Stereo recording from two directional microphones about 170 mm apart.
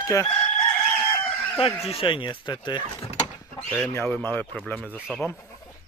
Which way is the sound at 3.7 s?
10° left (ahead or behind).